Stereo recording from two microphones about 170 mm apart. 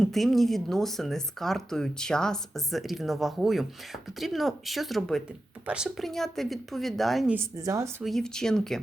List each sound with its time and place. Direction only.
0.0 s speech: centre (ahead or behind)
7.3 s speech: 20° right (ahead or behind)
8.0 s speech: 5° left (ahead or behind)